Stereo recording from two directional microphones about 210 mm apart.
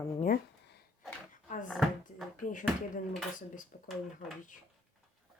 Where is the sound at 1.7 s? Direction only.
Centre (ahead or behind).